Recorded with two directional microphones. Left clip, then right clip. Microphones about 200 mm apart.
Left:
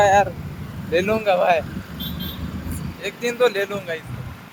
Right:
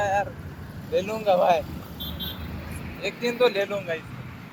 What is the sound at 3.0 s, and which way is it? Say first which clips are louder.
Speech: left 3 dB; 35° left (ahead or behind).